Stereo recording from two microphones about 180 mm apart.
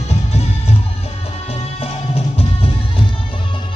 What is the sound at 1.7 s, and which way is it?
Music, 30° left (ahead or behind).